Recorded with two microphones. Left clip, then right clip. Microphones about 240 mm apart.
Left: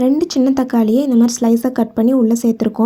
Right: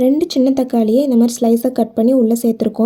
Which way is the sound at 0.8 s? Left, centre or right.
Left.